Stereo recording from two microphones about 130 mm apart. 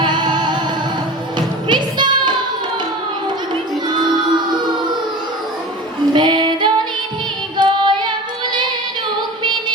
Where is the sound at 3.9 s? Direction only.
35° right (ahead or behind).